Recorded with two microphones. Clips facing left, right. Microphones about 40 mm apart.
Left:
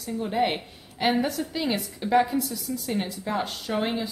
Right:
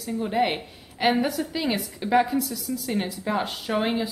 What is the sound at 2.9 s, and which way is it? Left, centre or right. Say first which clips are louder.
Speech: right 2 dB; centre.